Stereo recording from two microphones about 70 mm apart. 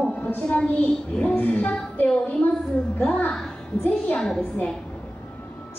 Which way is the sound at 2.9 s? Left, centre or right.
Left.